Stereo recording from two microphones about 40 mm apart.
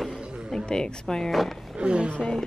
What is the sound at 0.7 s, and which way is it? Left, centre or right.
Speech, centre.